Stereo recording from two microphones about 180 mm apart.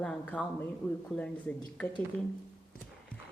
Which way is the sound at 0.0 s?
5° left (ahead or behind).